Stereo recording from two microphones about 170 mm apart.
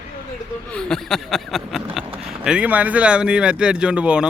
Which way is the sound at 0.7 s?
5° left (ahead or behind).